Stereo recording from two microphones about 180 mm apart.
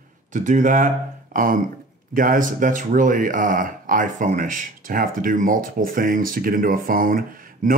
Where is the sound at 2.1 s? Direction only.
50° right (ahead or behind).